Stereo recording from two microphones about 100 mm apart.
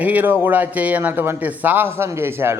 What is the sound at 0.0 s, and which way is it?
A man's voice, 15° right (ahead or behind).